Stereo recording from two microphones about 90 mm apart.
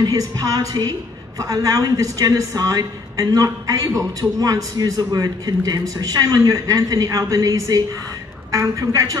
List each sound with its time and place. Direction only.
0.0 s a woman's voice: 40° right (ahead or behind)